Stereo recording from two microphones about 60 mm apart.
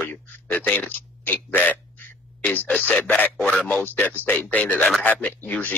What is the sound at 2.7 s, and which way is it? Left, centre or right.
Speech, centre.